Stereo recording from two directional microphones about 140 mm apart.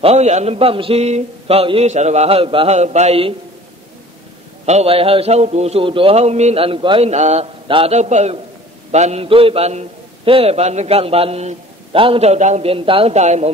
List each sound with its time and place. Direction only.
0.0 s a man's voice: 50° right (ahead or behind)
4.6 s a man's voice: 45° right (ahead or behind)
7.1 s a man's voice: 50° right (ahead or behind)
7.6 s a man's voice: 40° right (ahead or behind)
7.9 s a man's voice: 55° right (ahead or behind)